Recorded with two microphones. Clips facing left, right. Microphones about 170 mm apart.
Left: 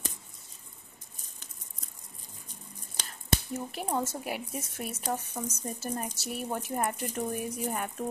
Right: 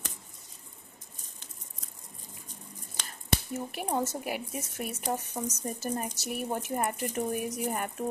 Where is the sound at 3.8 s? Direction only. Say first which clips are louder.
Right 1 dB; 20° right (ahead or behind).